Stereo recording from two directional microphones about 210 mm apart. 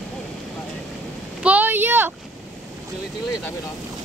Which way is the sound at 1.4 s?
5° right (ahead or behind).